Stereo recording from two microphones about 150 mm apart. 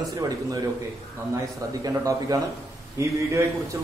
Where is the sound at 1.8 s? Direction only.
25° right (ahead or behind).